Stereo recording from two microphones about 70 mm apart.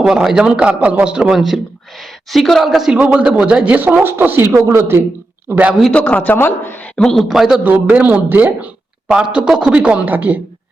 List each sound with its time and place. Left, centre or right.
0.0 s a woman's voice: centre
1.4 s a woman's voice: centre
2.9 s speech: centre; by 5.0 s right
5.5 s speech: right
5.9 s a man's voice: left
6.9 s a man's voice: centre
7.3 s a woman's voice: centre
7.6 s a man's voice: right